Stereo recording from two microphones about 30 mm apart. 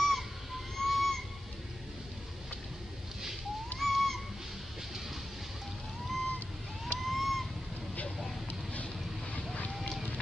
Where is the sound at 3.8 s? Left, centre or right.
Centre.